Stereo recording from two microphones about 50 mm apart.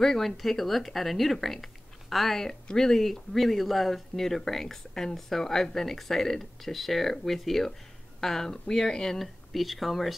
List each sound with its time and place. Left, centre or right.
0.0 s speech: centre